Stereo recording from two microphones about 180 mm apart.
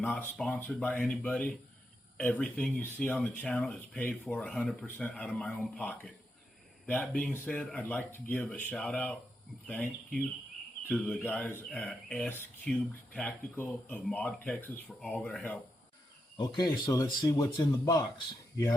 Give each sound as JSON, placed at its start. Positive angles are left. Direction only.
{"t": 0.0, "sound": "speech", "side_deg": 5}
{"t": 16.4, "sound": "speech", "side_deg": 20}